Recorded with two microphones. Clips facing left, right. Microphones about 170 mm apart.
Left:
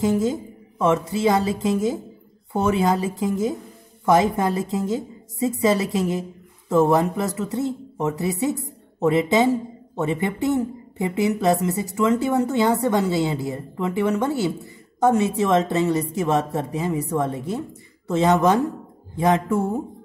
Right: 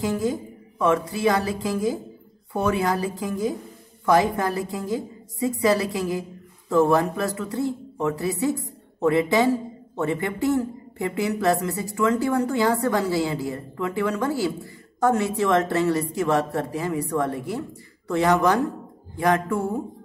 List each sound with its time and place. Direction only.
0.0 s a man's voice: 20° left (ahead or behind)